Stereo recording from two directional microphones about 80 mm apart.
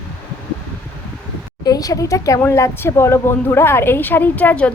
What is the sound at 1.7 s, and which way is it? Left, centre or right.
A woman's voice, left.